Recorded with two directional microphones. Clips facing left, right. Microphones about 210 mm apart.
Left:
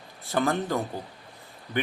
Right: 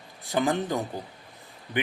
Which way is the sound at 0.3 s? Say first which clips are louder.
Even; 15° right (ahead or behind).